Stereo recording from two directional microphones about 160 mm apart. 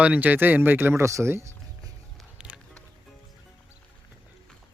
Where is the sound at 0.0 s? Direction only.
10° right (ahead or behind).